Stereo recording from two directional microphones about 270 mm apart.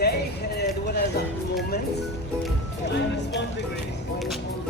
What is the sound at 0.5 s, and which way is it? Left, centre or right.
Music, left.